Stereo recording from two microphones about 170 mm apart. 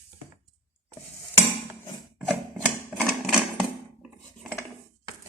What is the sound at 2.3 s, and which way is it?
Typewriter, 5° right (ahead or behind).